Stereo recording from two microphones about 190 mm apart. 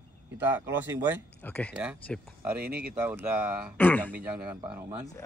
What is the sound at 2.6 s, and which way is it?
Speech, 55° right (ahead or behind).